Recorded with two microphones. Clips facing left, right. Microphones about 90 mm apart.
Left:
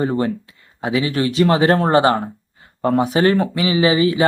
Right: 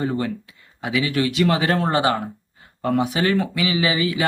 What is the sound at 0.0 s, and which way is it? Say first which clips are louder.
Speech: left 4 dB; 35° left (ahead or behind).